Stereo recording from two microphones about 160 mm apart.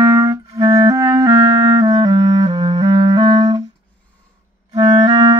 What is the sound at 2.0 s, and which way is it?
Clarinet, 30° right (ahead or behind).